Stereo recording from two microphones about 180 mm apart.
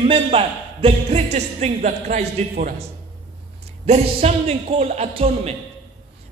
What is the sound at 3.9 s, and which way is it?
A man's voice, 35° right (ahead or behind).